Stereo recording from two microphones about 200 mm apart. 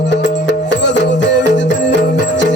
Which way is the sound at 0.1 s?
60° left (ahead or behind).